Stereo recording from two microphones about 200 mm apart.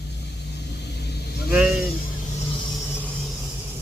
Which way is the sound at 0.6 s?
55° left (ahead or behind).